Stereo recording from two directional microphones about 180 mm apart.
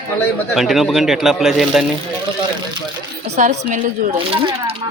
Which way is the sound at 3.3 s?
40° right (ahead or behind).